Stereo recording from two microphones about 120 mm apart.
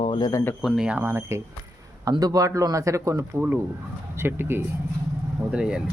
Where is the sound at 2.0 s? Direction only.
30° right (ahead or behind).